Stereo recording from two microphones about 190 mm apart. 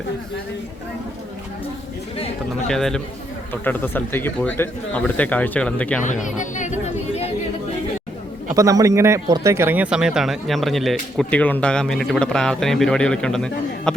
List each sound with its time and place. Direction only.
2.6 s speech: centre (ahead or behind)
6.0 s speech: 40° left (ahead or behind)
8.5 s speech: 15° right (ahead or behind); by 13.9 s 5° left (ahead or behind)